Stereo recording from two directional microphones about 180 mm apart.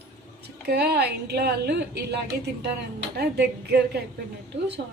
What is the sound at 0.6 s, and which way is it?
A woman's voice, 60° right (ahead or behind).